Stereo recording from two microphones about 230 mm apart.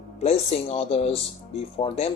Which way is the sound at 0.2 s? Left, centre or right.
Left.